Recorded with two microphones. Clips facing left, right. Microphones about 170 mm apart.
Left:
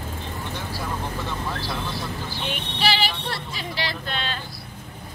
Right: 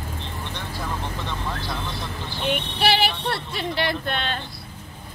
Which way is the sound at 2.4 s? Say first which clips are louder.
Right 4 dB; 60° right (ahead or behind).